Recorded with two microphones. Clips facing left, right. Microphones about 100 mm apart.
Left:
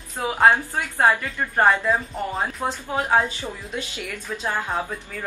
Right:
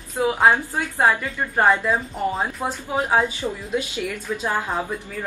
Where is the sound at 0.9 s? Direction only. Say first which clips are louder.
Even; centre (ahead or behind).